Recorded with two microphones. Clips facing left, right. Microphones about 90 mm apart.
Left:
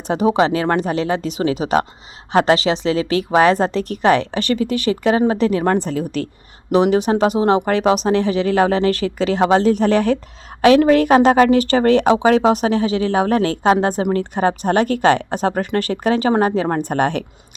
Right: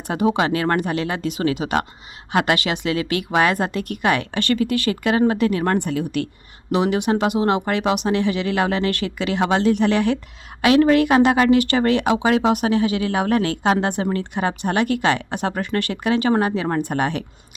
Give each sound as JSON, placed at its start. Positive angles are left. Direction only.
{"t": 0.1, "sound": "a woman's voice", "side_deg": 25}